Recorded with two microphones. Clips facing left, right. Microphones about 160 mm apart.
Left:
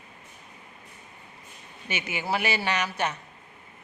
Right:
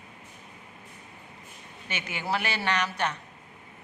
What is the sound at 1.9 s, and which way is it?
Speech, 10° left (ahead or behind).